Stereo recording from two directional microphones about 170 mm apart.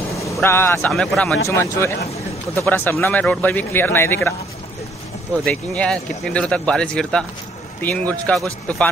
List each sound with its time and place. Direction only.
0.1 s speech: 15° left (ahead or behind)
1.5 s a man's voice: 15° left (ahead or behind)
5.4 s a man's voice: 5° left (ahead or behind)